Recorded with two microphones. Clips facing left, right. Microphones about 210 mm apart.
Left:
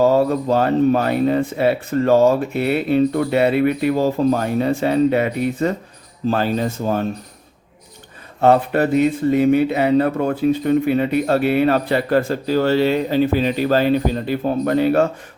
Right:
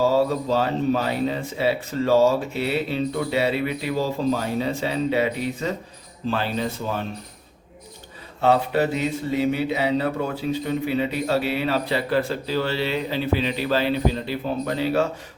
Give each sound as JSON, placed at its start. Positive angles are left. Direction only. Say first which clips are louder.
{"t": 0.1, "sound": "speech", "louder": "left 4 dB", "side_deg": 55}
{"t": 8.4, "sound": "speech", "louder": "left 5 dB", "side_deg": 50}